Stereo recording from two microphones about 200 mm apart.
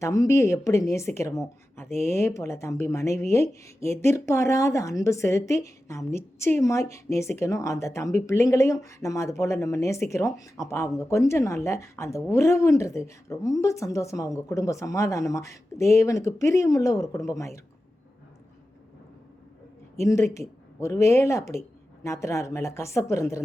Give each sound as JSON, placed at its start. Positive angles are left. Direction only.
{"t": 0.0, "sound": "speech", "side_deg": 15}
{"t": 20.0, "sound": "speech", "side_deg": 15}